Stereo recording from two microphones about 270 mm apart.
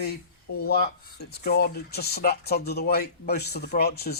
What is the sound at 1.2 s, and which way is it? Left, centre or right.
Speech, left.